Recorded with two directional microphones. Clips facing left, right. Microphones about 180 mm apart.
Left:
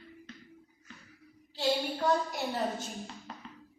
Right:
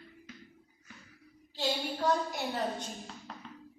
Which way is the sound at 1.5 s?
Centre (ahead or behind).